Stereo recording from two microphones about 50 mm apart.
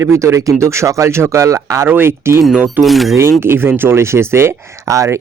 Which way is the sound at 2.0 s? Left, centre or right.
Right.